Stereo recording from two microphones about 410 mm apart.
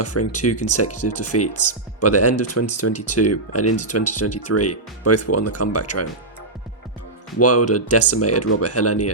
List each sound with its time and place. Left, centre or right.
0.0 s speech: left
7.3 s speech: left